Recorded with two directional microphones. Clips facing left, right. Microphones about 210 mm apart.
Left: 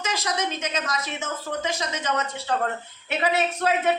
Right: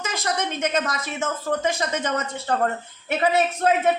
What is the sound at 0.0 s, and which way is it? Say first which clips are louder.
A woman's voice: right 1 dB; 55° right (ahead or behind).